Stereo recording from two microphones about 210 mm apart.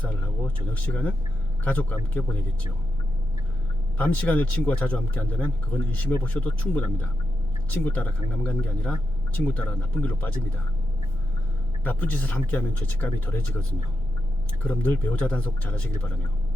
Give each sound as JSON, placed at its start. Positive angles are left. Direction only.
{"t": 0.0, "sound": "a sound", "side_deg": 5}
{"t": 1.6, "sound": "speech", "side_deg": 10}
{"t": 3.9, "sound": "speech", "side_deg": 5}
{"t": 11.8, "sound": "speech", "side_deg": 5}
{"t": 14.6, "sound": "speech", "side_deg": 5}